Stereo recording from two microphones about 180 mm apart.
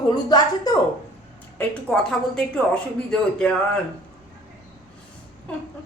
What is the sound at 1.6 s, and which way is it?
A woman's voice, 5° left (ahead or behind).